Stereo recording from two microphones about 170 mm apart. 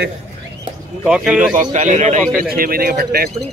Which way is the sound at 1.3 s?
50° right (ahead or behind).